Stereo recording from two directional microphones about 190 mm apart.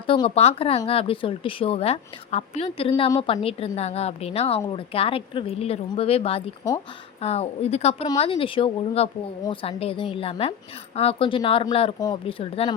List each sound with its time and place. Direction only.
0.1 s speech: 30° left (ahead or behind)